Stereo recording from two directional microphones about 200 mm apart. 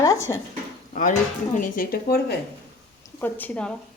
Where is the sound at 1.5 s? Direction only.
40° left (ahead or behind).